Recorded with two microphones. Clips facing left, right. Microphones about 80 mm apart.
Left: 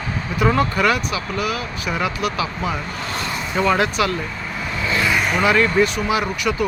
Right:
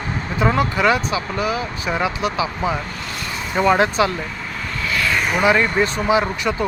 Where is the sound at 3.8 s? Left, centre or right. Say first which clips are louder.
Right 2 dB; right.